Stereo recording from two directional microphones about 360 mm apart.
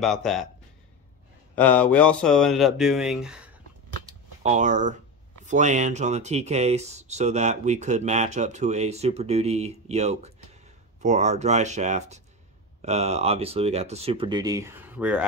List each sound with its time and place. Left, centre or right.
0.0 s speech: centre
1.5 s speech: centre
4.0 s a sound: centre
5.4 s speech: centre